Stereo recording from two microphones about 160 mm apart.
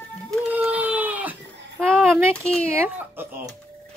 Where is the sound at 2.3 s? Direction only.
5° left (ahead or behind).